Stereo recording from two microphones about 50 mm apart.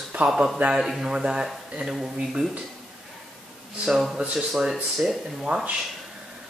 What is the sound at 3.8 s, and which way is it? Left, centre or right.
Speech, centre.